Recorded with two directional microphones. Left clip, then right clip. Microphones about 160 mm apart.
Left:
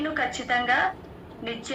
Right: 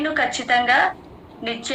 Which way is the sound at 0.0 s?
25° right (ahead or behind).